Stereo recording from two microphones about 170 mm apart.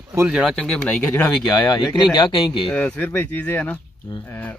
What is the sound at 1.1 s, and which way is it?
Speech, 15° left (ahead or behind).